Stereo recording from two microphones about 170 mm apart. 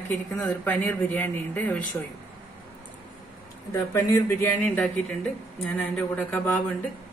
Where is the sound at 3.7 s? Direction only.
15° left (ahead or behind).